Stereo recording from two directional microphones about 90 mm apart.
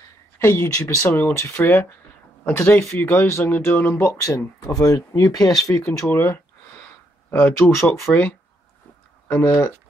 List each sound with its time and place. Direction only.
0.4 s speech: 30° left (ahead or behind)
4.7 s speech: 40° left (ahead or behind); by 8.4 s 15° left (ahead or behind)
9.3 s speech: 25° left (ahead or behind)